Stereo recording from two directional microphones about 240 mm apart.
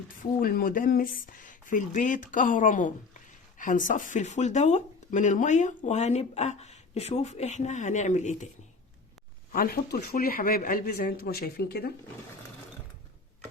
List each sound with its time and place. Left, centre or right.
0.2 s speech: left
9.5 s speech: left